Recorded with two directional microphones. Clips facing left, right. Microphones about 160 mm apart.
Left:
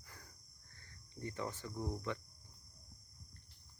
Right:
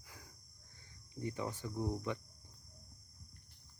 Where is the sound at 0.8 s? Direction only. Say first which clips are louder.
Right 3 dB; 10° right (ahead or behind).